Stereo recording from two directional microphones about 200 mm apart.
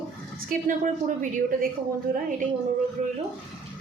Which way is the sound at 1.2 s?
40° right (ahead or behind).